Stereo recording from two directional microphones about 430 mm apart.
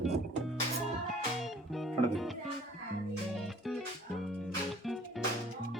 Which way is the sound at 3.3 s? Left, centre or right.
Centre.